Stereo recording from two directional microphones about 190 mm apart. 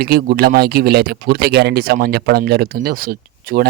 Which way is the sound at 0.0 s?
55° right (ahead or behind).